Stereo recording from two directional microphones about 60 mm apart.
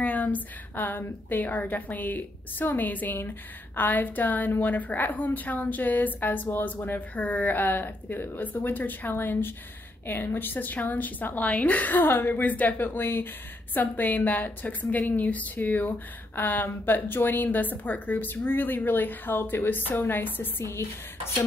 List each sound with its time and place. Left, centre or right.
0.0 s a woman's voice: left